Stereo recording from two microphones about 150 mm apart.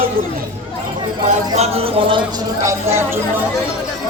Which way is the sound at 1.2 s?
50° right (ahead or behind).